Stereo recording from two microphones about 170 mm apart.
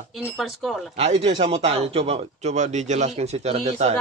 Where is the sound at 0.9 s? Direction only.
40° right (ahead or behind).